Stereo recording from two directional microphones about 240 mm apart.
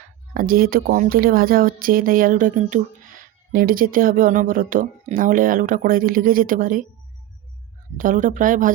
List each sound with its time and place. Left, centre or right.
0.3 s speech: right
7.9 s speech: right